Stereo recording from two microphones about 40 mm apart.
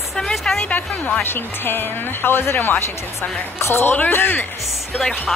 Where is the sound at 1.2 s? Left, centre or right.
Left.